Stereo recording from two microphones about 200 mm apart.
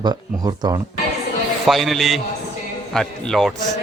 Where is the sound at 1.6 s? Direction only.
Centre (ahead or behind).